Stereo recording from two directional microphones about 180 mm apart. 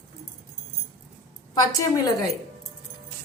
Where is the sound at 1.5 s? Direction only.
20° left (ahead or behind).